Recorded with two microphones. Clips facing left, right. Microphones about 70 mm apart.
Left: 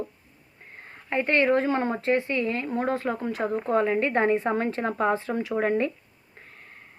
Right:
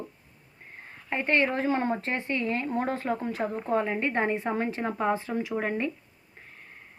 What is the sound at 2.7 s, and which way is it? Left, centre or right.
Speech, left.